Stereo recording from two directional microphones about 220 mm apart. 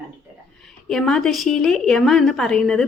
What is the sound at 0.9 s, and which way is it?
A woman's voice, centre (ahead or behind).